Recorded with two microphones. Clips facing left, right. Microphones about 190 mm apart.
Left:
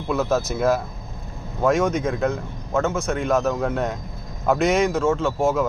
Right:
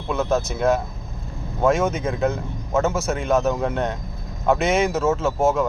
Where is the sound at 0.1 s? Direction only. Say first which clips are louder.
Even; 5° left (ahead or behind).